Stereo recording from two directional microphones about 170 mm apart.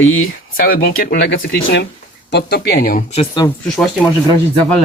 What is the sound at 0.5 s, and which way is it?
Speech, 60° left (ahead or behind).